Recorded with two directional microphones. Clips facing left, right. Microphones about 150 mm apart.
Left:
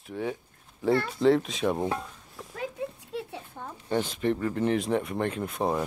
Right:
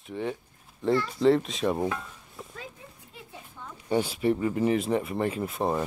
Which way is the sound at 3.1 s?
75° left (ahead or behind).